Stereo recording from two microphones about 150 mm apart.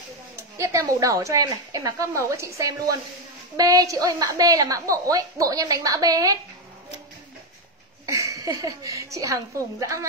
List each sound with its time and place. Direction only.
0.6 s a woman's voice: 20° right (ahead or behind)
8.1 s a woman's voice: 20° right (ahead or behind)